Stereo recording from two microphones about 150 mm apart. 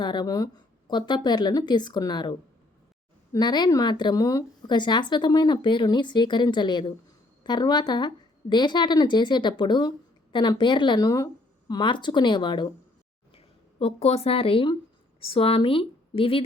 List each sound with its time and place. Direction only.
0.0 s a woman's voice: 30° left (ahead or behind)
3.3 s a woman's voice: 30° left (ahead or behind)